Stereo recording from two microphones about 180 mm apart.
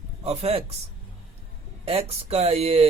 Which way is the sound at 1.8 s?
35° right (ahead or behind).